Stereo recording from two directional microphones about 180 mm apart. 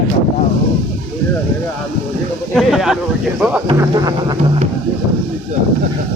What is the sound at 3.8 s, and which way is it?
Music, 20° right (ahead or behind).